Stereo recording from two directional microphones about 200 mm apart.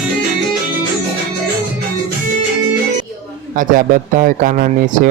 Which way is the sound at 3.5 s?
40° right (ahead or behind).